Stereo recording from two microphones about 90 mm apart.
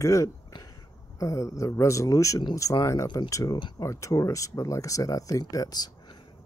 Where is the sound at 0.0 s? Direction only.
35° left (ahead or behind).